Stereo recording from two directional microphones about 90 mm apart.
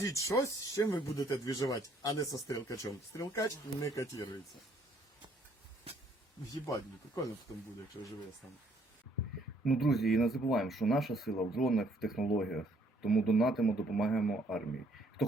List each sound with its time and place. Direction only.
0.0 s speech: 35° left (ahead or behind)
6.5 s speech: 45° left (ahead or behind)
9.6 s speech: centre (ahead or behind)